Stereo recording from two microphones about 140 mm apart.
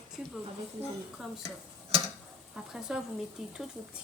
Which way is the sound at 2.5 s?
5° right (ahead or behind).